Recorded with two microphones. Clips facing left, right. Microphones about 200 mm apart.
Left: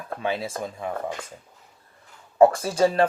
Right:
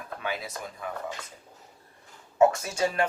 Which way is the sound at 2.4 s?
30° left (ahead or behind).